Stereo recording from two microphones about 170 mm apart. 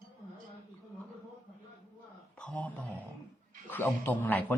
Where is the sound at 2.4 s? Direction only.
5° left (ahead or behind).